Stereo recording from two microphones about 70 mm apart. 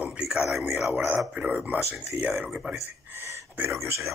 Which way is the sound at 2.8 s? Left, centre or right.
Right.